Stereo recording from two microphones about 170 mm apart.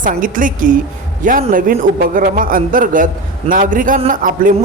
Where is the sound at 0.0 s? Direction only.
50° right (ahead or behind).